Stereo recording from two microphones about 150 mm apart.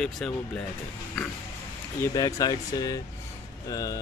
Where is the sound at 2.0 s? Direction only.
20° left (ahead or behind).